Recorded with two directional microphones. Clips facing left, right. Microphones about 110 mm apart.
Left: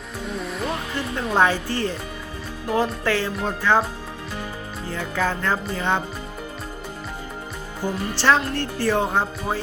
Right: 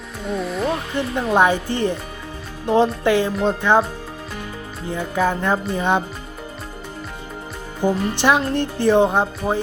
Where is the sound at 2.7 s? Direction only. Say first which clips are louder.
Right 6 dB; 25° right (ahead or behind).